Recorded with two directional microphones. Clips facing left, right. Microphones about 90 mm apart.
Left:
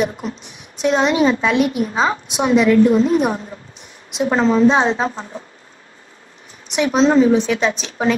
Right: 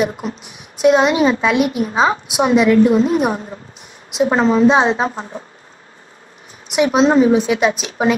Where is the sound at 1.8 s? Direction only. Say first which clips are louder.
Right 2 dB; 35° right (ahead or behind).